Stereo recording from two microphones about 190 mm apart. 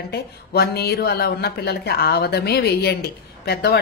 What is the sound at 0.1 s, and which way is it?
A woman's voice, 55° left (ahead or behind).